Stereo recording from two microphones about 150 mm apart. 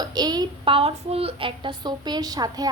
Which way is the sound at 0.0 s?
25° right (ahead or behind).